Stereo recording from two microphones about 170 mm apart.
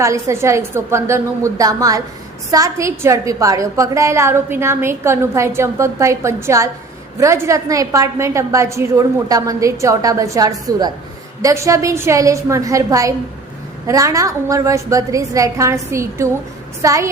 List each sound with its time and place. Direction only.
0.0 s a woman's voice: 15° right (ahead or behind)